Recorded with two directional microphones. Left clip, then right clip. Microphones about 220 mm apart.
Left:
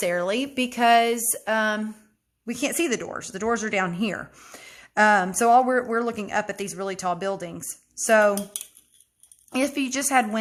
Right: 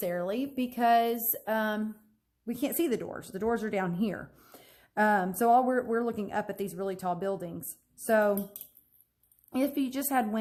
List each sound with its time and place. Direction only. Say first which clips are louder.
0.0 s speech: left 8 dB; 20° left (ahead or behind)
9.5 s speech: left 5 dB; 10° left (ahead or behind)